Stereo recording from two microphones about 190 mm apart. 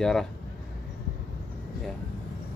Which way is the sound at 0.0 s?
Centre (ahead or behind).